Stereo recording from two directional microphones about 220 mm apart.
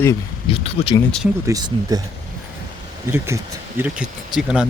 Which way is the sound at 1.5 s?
15° right (ahead or behind).